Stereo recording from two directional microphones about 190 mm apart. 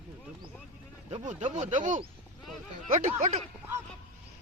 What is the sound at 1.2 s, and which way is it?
Speech, 40° right (ahead or behind).